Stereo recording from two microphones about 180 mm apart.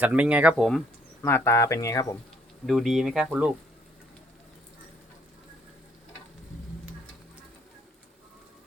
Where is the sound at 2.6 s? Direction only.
Centre (ahead or behind).